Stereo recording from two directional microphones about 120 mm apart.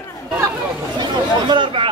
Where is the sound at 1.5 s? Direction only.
45° right (ahead or behind).